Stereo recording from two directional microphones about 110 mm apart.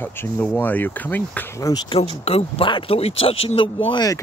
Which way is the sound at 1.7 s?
30° left (ahead or behind).